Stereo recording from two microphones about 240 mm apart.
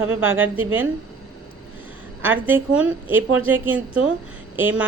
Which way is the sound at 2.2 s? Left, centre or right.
Centre.